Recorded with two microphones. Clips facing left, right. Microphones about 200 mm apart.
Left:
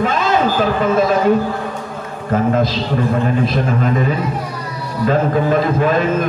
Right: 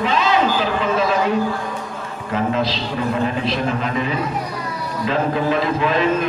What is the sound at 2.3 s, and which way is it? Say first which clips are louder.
A man's voice: left 5 dB; 50° left (ahead or behind).